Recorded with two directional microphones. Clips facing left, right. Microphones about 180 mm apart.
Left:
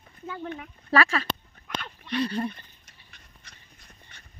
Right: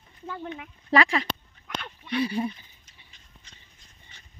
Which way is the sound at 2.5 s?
65° left (ahead or behind).